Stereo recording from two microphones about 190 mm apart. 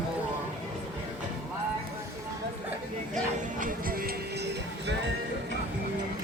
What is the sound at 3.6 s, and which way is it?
Music, 50° right (ahead or behind).